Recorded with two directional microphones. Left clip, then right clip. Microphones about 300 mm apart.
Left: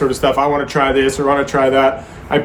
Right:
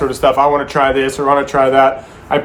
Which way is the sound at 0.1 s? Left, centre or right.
Centre.